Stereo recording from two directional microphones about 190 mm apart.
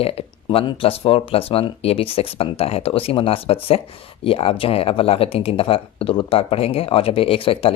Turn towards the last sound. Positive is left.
turn(degrees=30)  # may be behind; listen again after turning